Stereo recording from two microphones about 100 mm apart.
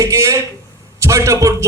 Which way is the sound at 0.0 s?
30° right (ahead or behind).